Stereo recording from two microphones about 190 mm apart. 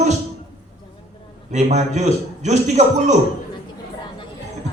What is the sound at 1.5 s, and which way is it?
A man's voice, 35° right (ahead or behind).